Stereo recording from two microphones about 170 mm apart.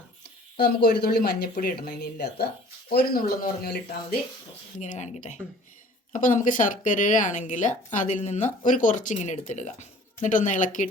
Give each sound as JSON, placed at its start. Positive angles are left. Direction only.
{"t": 0.5, "sound": "speech", "side_deg": 70}
{"t": 2.9, "sound": "speech", "side_deg": 60}
{"t": 4.8, "sound": "speech", "side_deg": 45}